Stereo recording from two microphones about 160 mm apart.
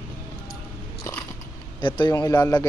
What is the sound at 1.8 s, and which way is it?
Speech, 30° left (ahead or behind).